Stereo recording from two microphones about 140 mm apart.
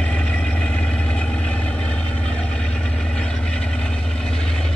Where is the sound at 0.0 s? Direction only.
10° left (ahead or behind).